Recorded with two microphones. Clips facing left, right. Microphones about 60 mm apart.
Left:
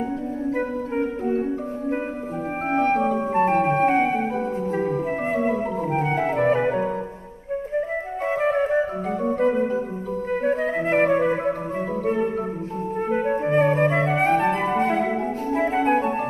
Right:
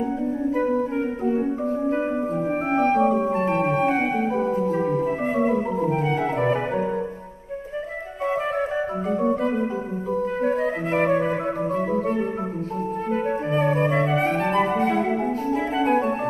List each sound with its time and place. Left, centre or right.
3.0 s music: centre
3.7 s organ: left
4.8 s music: centre
5.9 s organ: left
10.4 s flute: left
13.1 s music: left
13.6 s flute: left
14.7 s music: left
15.5 s organ: left